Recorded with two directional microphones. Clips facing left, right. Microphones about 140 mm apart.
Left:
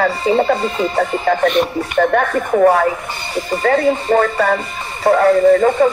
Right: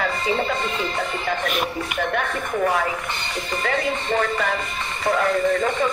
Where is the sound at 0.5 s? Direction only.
50° left (ahead or behind).